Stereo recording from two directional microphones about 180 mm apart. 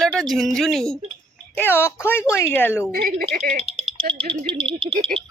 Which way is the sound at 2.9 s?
55° right (ahead or behind).